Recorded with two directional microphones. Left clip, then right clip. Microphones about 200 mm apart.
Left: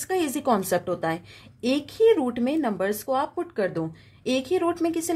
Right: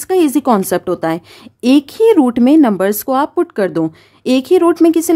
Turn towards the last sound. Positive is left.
turn(degrees=-45)  # may be behind; listen again after turning